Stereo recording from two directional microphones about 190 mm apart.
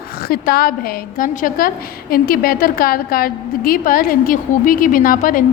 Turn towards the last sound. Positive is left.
turn(degrees=45)  # may be behind; listen again after turning